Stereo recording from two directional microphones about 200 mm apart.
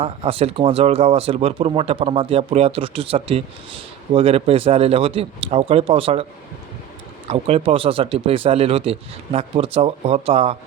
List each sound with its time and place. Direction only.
0.0 s speech: 30° right (ahead or behind)
7.3 s speech: 30° right (ahead or behind)